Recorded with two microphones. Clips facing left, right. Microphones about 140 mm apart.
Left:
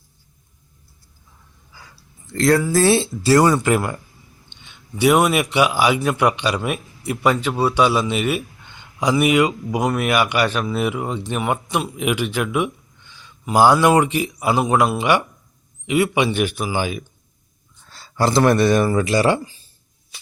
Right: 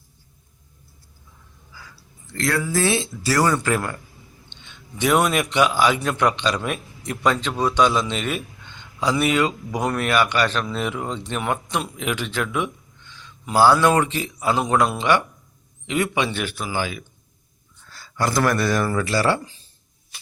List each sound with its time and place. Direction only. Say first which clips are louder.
2.3 s speech: left 7 dB; 35° left (ahead or behind); by 4.0 s 15° left (ahead or behind)
4.5 s a sound: even; 10° left (ahead or behind)
4.9 s a man's voice: left 4 dB; 10° left (ahead or behind)
19.4 s speech: left 4 dB; 5° left (ahead or behind)